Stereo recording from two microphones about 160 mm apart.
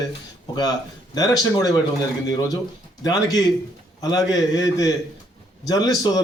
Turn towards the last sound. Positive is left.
turn(degrees=25)  # may be behind; listen again after turning